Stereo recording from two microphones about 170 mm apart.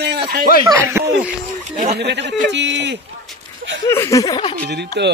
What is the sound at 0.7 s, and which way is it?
Speech, 15° right (ahead or behind).